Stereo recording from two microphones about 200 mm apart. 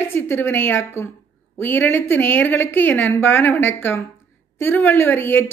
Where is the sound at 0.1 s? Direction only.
10° left (ahead or behind).